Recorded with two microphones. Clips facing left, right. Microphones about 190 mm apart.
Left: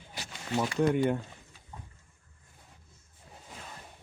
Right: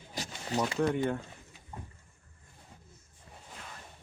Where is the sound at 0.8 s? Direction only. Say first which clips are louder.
Left 5 dB; 10° left (ahead or behind).